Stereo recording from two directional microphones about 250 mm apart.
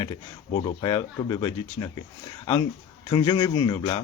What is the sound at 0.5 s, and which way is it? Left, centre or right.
Speech, centre.